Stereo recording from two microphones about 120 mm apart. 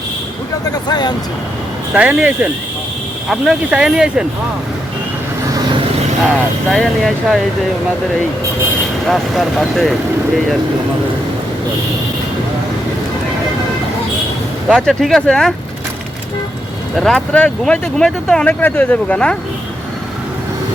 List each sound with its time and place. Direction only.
0.7 s speech: 35° left (ahead or behind)
1.9 s speech: 10° right (ahead or behind)
6.7 s speech: 5° left (ahead or behind)
9.0 s speech: centre (ahead or behind)
14.7 s speech: centre (ahead or behind)
17.0 s speech: 5° left (ahead or behind)